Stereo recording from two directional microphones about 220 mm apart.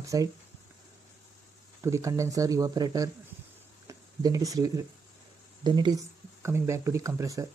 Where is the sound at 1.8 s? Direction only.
15° right (ahead or behind).